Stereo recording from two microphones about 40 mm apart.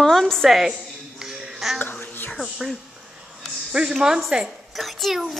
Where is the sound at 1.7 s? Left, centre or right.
Left.